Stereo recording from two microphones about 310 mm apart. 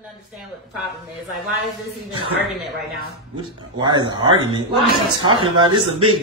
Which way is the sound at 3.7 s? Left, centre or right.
Centre.